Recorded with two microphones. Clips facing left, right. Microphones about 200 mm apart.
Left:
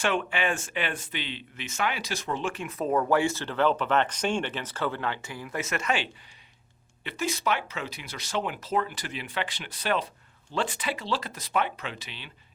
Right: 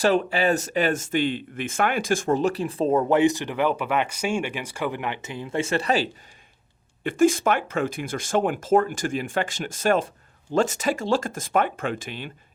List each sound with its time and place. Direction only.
0.0 s speech: 35° right (ahead or behind)
7.0 s speech: 50° right (ahead or behind)